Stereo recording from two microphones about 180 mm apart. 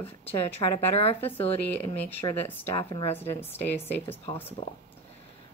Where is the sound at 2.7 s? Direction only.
30° left (ahead or behind).